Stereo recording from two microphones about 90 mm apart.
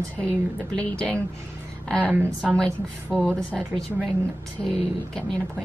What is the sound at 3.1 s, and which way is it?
Speech, 10° left (ahead or behind).